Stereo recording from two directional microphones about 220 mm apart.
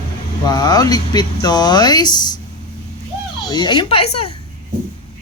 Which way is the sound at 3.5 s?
20° left (ahead or behind).